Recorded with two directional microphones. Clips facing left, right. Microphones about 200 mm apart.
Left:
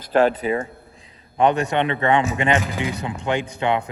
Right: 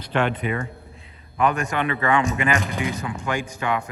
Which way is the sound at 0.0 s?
40° left (ahead or behind).